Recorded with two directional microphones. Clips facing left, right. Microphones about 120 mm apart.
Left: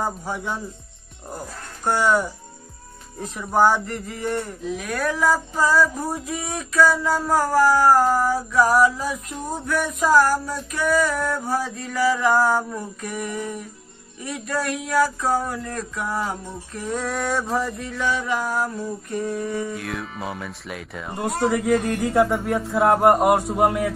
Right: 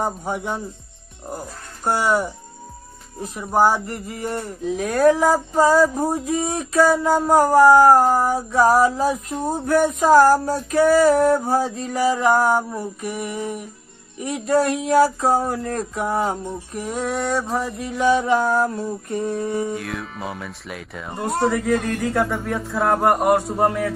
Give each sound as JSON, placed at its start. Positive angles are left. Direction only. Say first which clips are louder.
{"t": 0.0, "sound": "female singing", "louder": "right 2 dB", "side_deg": -20}
{"t": 1.9, "sound": "speech", "louder": "even", "side_deg": -40}
{"t": 3.2, "sound": "speech", "louder": "right 1 dB", "side_deg": -15}
{"t": 4.7, "sound": "female singing", "louder": "right 10 dB", "side_deg": -30}
{"t": 14.2, "sound": "female singing", "louder": "right 7 dB", "side_deg": -25}
{"t": 16.7, "sound": "speech", "louder": "right 1 dB", "side_deg": -10}
{"t": 17.8, "sound": "female singing", "louder": "right 7 dB", "side_deg": -15}
{"t": 19.7, "sound": "speech", "louder": "right 2 dB", "side_deg": 0}
{"t": 23.0, "sound": "a man's voice", "louder": "even", "side_deg": 20}